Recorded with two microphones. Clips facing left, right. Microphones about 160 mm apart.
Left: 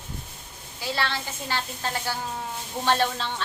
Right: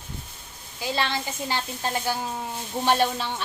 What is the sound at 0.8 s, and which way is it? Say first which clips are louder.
A woman's voice: right 2 dB; 15° right (ahead or behind).